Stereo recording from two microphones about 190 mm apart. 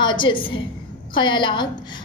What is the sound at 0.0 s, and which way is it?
A woman's voice, 25° left (ahead or behind).